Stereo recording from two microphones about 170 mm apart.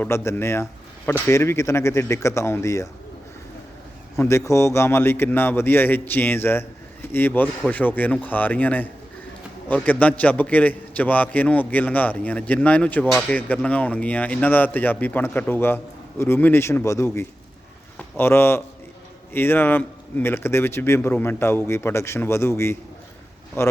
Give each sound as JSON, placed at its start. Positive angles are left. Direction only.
{"t": 0.0, "sound": "a man's voice", "side_deg": 15}
{"t": 4.2, "sound": "speech", "side_deg": 15}